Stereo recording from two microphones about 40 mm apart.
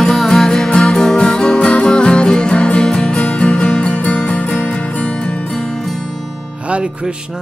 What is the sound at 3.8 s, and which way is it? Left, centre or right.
Music, left.